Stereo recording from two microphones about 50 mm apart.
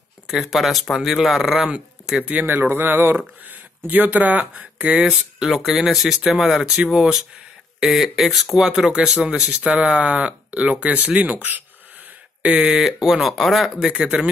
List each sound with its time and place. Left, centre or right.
0.3 s speech: centre
2.1 s speech: right
2.4 s speech: right
5.4 s speech: centre
6.6 s speech: centre; by 11.6 s right
12.5 s speech: centre
13.7 s speech: centre